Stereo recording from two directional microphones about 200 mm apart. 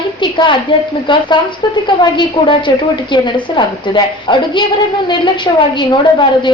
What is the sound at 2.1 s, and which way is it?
Speech, 25° left (ahead or behind).